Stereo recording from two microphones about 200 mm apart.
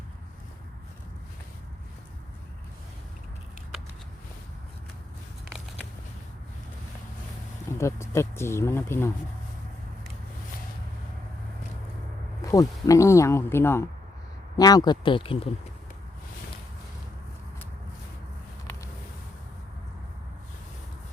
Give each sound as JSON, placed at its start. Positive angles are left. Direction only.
{"t": 7.8, "sound": "speech", "side_deg": 15}
{"t": 12.4, "sound": "speech", "side_deg": 15}